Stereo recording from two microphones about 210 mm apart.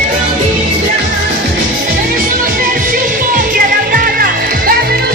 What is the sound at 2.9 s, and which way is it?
Music, 45° right (ahead or behind).